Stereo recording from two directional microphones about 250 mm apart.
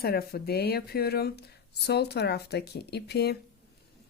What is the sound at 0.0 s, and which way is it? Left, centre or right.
Speech, left.